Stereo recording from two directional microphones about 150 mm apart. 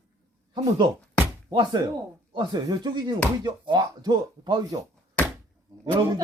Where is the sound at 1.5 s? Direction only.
30° right (ahead or behind).